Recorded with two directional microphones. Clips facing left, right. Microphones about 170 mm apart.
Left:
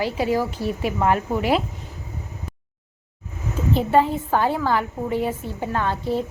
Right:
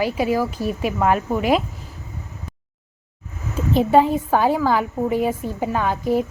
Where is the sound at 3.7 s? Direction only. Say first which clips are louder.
Right 4 dB; 15° right (ahead or behind).